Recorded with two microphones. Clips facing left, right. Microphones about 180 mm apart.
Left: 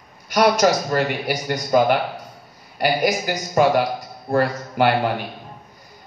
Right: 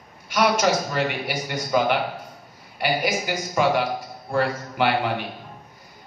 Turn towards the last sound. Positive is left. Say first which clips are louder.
# left 4 dB
turn(degrees=45)  # may be behind; listen again after turning